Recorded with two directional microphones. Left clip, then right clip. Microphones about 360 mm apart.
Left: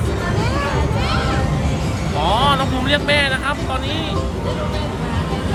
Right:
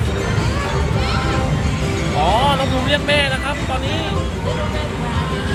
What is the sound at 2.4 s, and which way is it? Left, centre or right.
Speech, centre.